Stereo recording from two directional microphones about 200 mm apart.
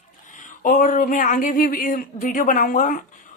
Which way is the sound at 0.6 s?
40° left (ahead or behind).